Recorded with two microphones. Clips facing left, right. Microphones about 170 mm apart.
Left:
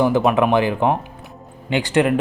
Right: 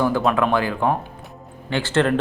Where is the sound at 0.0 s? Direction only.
20° left (ahead or behind).